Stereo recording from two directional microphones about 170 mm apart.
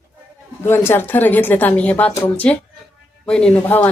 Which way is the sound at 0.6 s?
15° left (ahead or behind).